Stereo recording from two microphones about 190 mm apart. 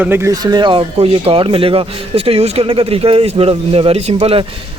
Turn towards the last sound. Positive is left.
turn(degrees=-30)  # may be behind; listen again after turning